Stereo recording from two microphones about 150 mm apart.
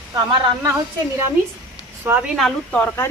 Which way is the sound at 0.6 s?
20° right (ahead or behind).